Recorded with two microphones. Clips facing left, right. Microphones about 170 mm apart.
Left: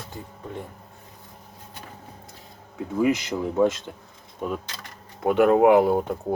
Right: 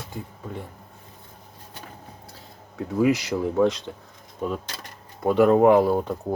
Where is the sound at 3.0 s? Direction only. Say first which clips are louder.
Right 2 dB; centre (ahead or behind).